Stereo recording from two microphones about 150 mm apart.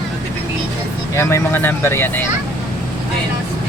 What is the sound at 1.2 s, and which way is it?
Speech, 20° left (ahead or behind).